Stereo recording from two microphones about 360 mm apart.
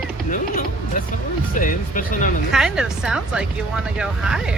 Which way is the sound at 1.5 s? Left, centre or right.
Left.